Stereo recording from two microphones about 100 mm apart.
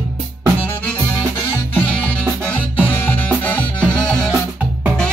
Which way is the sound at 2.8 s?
20° left (ahead or behind).